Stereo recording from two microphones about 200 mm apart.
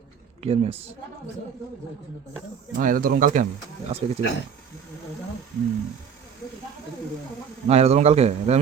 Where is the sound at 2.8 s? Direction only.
45° right (ahead or behind).